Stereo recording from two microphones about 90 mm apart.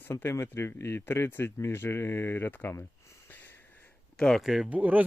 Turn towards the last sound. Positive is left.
turn(degrees=-20)  # may be behind; listen again after turning